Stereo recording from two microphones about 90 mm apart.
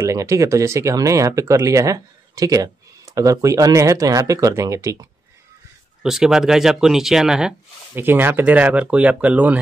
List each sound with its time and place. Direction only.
0.0 s speech: 35° right (ahead or behind)
6.0 s speech: 5° right (ahead or behind)
7.9 s speech: 25° right (ahead or behind)